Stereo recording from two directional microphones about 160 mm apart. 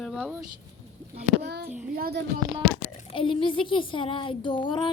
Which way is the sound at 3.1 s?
35° left (ahead or behind).